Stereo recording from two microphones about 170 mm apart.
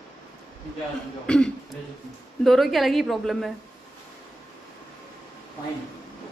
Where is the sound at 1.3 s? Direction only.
5° left (ahead or behind).